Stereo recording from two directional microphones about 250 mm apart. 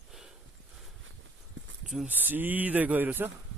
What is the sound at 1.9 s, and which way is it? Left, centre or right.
Speech, centre.